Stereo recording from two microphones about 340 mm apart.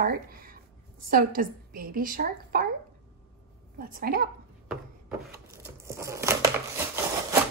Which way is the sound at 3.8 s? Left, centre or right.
Right.